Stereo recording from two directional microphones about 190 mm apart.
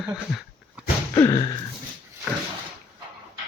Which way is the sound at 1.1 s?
20° left (ahead or behind).